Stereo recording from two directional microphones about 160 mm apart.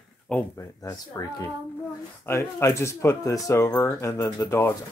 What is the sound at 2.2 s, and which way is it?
Speech, 20° left (ahead or behind).